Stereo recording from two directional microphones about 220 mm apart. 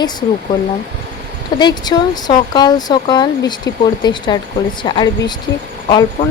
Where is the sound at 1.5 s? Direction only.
20° left (ahead or behind).